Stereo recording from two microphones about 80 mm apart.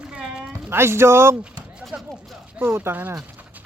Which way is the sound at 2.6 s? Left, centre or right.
Right.